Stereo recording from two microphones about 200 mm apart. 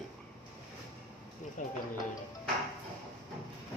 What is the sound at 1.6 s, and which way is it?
Speech, 40° left (ahead or behind).